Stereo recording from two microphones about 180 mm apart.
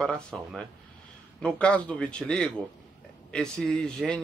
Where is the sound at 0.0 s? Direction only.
Centre (ahead or behind).